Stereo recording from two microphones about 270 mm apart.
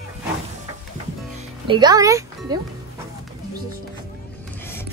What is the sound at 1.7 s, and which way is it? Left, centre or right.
Speech, centre.